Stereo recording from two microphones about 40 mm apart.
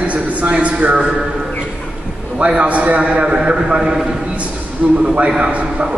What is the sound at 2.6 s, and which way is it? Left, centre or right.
A man's voice, right.